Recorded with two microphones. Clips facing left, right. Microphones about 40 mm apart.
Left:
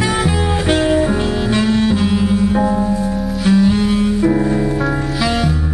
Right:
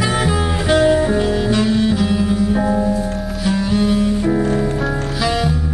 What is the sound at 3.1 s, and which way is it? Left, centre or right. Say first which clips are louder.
Music: left 4 dB; centre.